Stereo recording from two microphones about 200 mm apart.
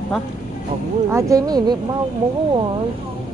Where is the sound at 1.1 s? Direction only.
20° right (ahead or behind).